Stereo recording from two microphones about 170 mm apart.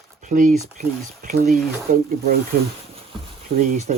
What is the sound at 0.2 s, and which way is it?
Speech, 45° right (ahead or behind).